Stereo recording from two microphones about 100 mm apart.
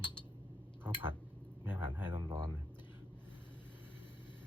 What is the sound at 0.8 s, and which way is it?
Speech, 20° right (ahead or behind).